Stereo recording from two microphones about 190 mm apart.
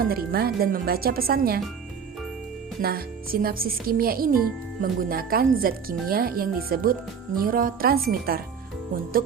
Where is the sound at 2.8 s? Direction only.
55° right (ahead or behind).